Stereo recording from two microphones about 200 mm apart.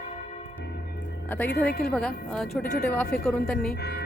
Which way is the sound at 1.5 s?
55° left (ahead or behind).